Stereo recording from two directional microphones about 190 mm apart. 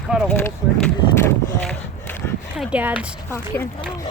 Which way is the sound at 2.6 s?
5° right (ahead or behind).